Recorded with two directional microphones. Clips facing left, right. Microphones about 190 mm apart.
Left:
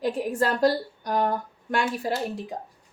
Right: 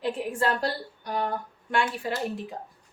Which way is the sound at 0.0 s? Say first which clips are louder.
Left 2 dB; 40° left (ahead or behind).